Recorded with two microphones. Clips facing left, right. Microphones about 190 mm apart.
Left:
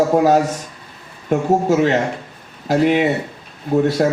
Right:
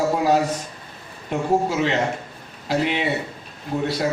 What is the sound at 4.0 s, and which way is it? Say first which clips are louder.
Speech: left 5 dB; 50° left (ahead or behind).